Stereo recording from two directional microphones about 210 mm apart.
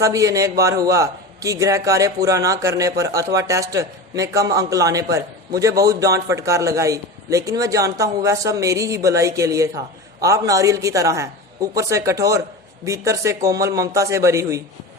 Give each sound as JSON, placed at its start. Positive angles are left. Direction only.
{"t": 0.0, "sound": "a man's voice", "side_deg": -15}